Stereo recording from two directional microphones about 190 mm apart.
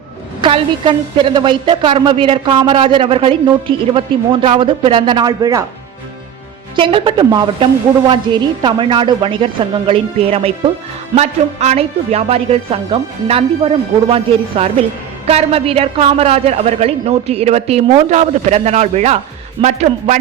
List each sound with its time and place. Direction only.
0.4 s speech: 25° right (ahead or behind)
6.7 s a woman's voice: 25° right (ahead or behind)